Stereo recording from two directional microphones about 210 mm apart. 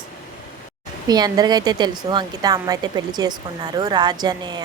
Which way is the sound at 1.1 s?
20° right (ahead or behind).